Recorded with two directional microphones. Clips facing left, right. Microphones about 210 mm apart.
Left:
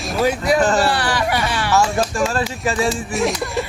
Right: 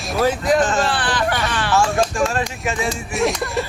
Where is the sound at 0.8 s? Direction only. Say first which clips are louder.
Left 2 dB; 10° left (ahead or behind).